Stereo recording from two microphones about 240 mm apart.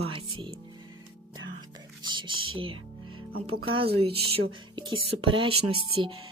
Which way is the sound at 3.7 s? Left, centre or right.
Right.